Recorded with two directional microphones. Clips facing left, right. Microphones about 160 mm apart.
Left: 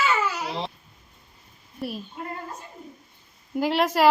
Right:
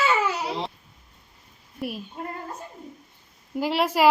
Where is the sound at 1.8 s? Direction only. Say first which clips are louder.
Even; 10° right (ahead or behind).